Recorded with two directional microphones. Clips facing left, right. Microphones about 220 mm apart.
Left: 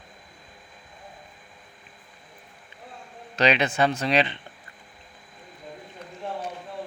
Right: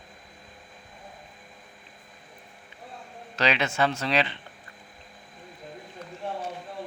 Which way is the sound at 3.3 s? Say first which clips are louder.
Left 4 dB; 20° left (ahead or behind).